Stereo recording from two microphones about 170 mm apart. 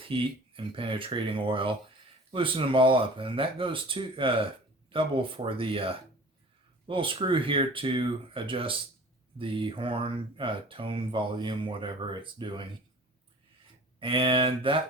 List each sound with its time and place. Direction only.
0.0 s speech: 30° right (ahead or behind)
14.0 s speech: 30° right (ahead or behind)